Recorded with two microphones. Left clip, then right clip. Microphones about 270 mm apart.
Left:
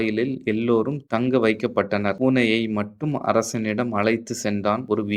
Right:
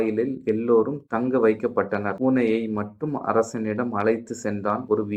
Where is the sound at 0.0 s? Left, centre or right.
Left.